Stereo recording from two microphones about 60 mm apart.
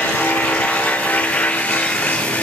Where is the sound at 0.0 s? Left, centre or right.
Left.